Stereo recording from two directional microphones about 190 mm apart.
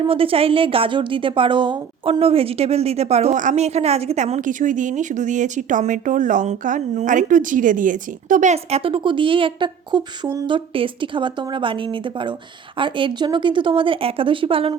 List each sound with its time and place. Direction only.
0.0 s a woman's voice: 30° right (ahead or behind)